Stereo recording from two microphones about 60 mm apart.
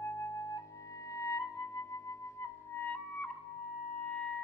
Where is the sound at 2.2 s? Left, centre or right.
Left.